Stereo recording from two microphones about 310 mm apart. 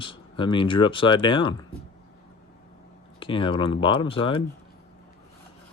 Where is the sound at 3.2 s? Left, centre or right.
Centre.